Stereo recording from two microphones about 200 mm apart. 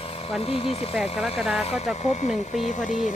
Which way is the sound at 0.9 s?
Centre (ahead or behind).